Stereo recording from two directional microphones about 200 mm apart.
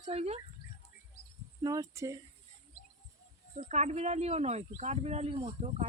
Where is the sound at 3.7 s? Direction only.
35° right (ahead or behind).